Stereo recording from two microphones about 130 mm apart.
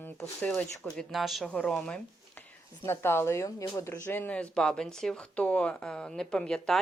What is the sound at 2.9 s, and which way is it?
Speech, 20° left (ahead or behind).